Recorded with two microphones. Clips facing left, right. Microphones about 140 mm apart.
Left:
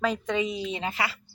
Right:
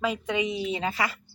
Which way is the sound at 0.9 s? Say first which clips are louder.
Right 1 dB; 40° right (ahead or behind).